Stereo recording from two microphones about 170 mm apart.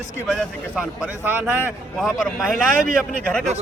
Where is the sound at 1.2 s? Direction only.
10° right (ahead or behind).